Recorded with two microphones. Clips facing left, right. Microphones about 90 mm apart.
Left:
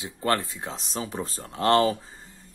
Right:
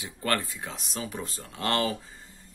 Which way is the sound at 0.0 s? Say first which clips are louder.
Left 3 dB; 25° left (ahead or behind).